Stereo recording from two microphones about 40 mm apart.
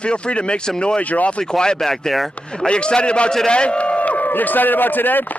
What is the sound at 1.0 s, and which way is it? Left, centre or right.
Speech, left.